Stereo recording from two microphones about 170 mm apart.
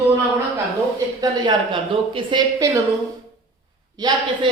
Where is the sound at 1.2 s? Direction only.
25° right (ahead or behind).